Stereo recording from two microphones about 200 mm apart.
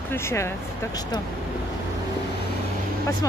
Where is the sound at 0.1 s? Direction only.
10° left (ahead or behind).